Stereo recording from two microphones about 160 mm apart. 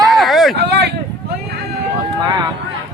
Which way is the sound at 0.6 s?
90° right.